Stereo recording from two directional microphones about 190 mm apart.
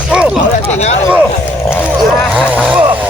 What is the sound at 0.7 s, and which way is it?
Speech, 35° left (ahead or behind).